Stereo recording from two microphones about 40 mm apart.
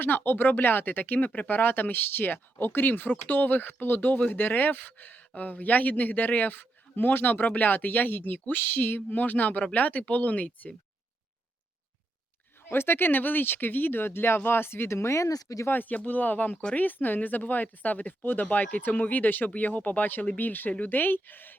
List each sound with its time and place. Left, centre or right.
0.3 s speech: left
7.4 s speech: left
12.6 s speech: left
15.8 s speech: left
18.5 s speech: left
20.9 s speech: left